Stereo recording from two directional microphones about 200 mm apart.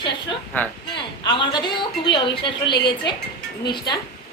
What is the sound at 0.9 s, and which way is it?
Speech, 25° left (ahead or behind).